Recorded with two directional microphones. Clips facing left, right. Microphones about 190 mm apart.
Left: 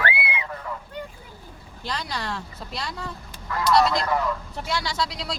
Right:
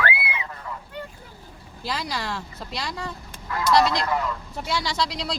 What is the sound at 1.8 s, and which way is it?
Speech, 5° right (ahead or behind).